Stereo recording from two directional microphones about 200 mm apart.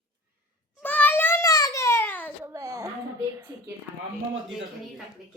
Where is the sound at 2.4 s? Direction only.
15° right (ahead or behind).